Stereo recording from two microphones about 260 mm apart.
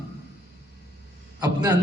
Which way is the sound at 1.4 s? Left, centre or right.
Centre.